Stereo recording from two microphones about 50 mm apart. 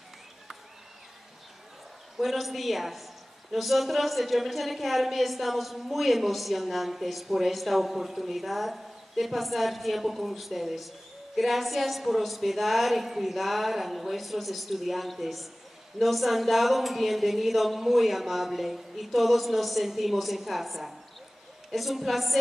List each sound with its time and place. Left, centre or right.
2.1 s a woman's voice: centre